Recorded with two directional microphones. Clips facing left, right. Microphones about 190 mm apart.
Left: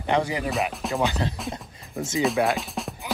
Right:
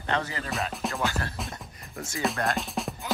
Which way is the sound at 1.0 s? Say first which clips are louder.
Left 7 dB; 20° left (ahead or behind).